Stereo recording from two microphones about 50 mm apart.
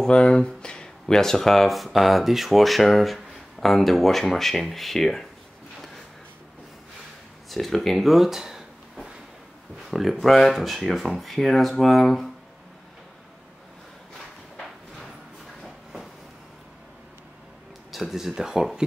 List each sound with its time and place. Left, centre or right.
0.0 s speech: centre
7.4 s speech: centre
9.8 s speech: centre
15.6 s train: centre
17.9 s speech: centre